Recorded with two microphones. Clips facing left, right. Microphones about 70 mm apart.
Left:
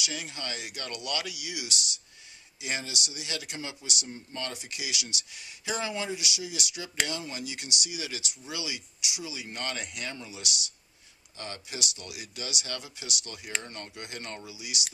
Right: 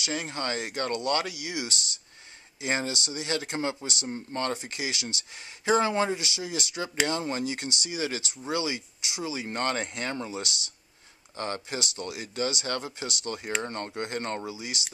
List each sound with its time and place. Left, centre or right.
0.0 s speech: right